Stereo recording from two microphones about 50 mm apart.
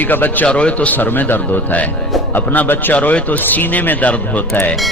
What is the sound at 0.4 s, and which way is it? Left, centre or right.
A man's voice, left.